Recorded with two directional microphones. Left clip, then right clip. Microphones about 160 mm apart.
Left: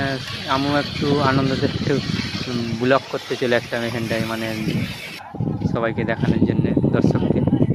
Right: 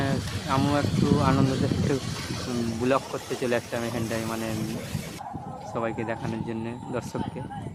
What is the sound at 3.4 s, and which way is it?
Speech, 20° left (ahead or behind).